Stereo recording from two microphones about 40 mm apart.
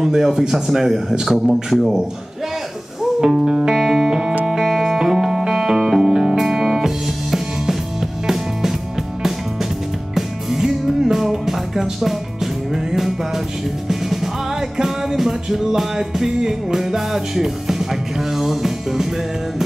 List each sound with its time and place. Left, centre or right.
0.0 s speech: centre
3.2 s speech: centre
3.7 s music: centre
10.1 s music: centre